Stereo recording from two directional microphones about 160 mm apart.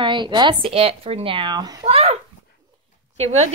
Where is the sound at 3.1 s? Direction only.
40° right (ahead or behind).